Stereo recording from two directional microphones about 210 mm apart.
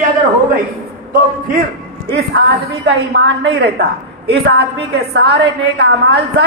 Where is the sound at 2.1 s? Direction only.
55° right (ahead or behind).